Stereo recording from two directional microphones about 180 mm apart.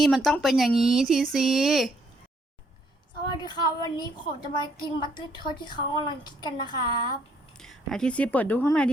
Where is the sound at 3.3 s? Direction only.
25° left (ahead or behind).